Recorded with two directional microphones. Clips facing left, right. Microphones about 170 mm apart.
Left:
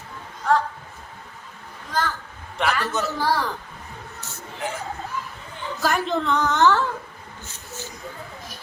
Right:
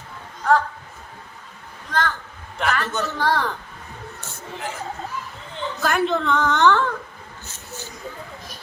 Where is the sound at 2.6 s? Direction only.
5° left (ahead or behind).